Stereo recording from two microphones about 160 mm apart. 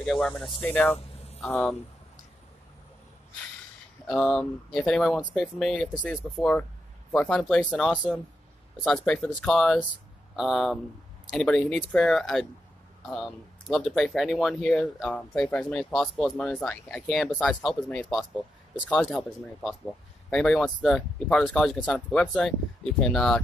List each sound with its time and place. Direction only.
0.0 s speech: 5° left (ahead or behind)
0.9 s a sound: 40° left (ahead or behind)
1.5 s speech: 5° left (ahead or behind)
4.1 s speech: 5° left (ahead or behind)
8.8 s speech: 5° left (ahead or behind)
18.9 s speech: centre (ahead or behind)